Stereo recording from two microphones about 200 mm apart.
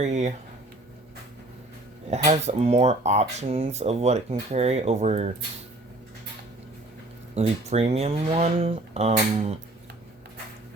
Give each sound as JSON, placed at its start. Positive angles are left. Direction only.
{"t": 0.0, "sound": "speech", "side_deg": -35}
{"t": 2.0, "sound": "speech", "side_deg": -35}
{"t": 7.3, "sound": "speech", "side_deg": -30}